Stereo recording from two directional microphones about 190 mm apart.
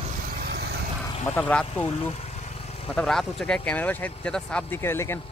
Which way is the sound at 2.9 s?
Centre (ahead or behind).